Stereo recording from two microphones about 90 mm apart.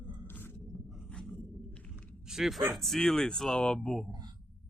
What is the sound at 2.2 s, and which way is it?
Speech, 5° right (ahead or behind).